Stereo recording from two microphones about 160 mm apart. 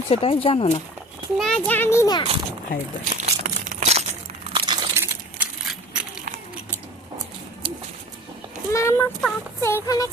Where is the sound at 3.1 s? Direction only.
45° right (ahead or behind).